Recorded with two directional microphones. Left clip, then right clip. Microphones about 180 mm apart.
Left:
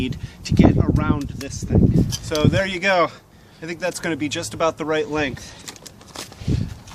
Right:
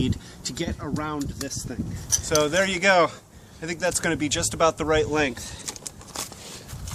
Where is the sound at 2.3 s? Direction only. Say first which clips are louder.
Even; 10° right (ahead or behind).